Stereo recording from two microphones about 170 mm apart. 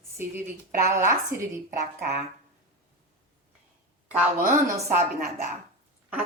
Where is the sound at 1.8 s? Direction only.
70° right (ahead or behind).